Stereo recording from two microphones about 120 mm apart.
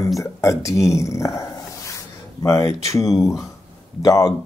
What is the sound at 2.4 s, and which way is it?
Speech, 25° left (ahead or behind).